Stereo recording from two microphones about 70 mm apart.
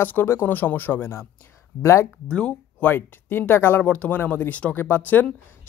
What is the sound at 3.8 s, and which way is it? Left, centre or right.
Speech, centre.